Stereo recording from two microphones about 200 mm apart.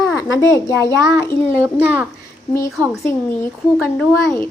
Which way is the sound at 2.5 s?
15° left (ahead or behind).